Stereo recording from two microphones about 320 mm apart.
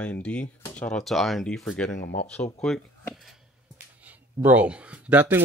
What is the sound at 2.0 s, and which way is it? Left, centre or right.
Speech, left.